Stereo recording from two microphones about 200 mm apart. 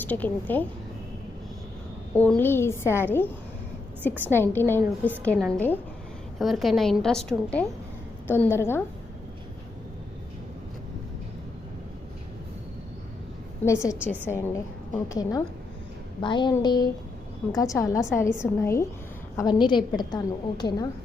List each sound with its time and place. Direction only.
0.0 s a woman's voice: 10° left (ahead or behind)
2.1 s a woman's voice: 5° left (ahead or behind)
4.3 s a woman's voice: 10° left (ahead or behind)
4.8 s a woman's voice: 10° right (ahead or behind)
5.2 s a woman's voice: 5° left (ahead or behind)
13.7 s a woman's voice: 15° left (ahead or behind)